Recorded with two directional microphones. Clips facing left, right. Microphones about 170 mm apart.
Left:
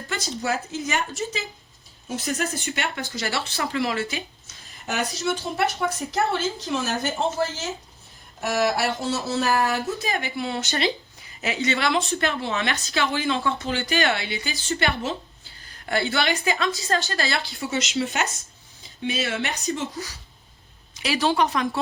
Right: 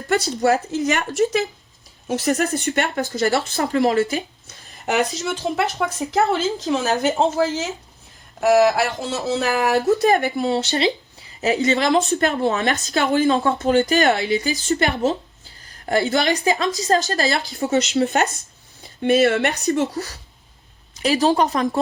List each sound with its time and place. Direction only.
0.1 s speech: 60° right (ahead or behind)
2.6 s speech: 45° right (ahead or behind)
4.4 s a sound: 75° right (ahead or behind)
5.8 s a woman's voice: 90° right
10.0 s speech: 50° right (ahead or behind)
21.0 s speech: 40° right (ahead or behind)